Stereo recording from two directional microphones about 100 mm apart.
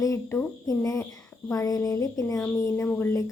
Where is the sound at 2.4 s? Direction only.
25° left (ahead or behind).